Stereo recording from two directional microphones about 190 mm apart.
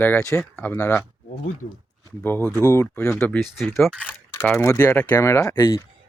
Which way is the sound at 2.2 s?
10° left (ahead or behind).